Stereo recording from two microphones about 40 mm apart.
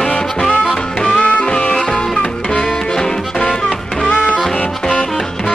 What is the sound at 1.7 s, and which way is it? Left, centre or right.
Music, centre.